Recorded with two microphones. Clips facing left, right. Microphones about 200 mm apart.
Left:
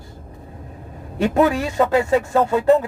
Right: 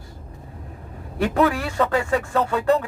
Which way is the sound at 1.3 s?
20° left (ahead or behind).